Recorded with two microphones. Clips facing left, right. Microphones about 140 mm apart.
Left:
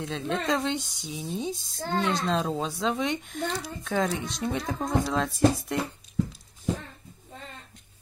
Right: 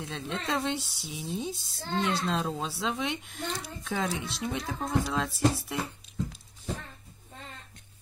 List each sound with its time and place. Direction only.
0.0 s speech: 5° right (ahead or behind)
1.8 s a woman's voice: 45° left (ahead or behind)
2.1 s speech: 5° right (ahead or behind)